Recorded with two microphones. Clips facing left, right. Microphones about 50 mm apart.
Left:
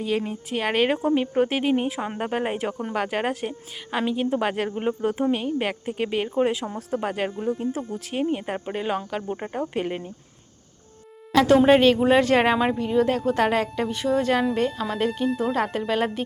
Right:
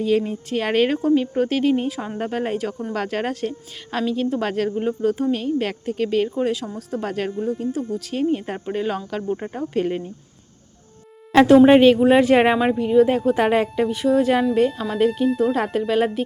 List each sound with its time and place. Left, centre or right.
0.0 s a woman's voice: centre; by 7.0 s left
7.0 s speech: centre
7.6 s a woman's voice: left; by 10.0 s centre
11.4 s speech: centre